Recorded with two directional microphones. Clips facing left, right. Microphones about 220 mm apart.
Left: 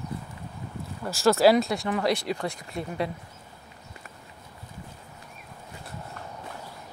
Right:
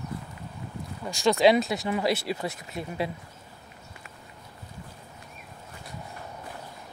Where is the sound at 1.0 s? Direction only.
5° left (ahead or behind).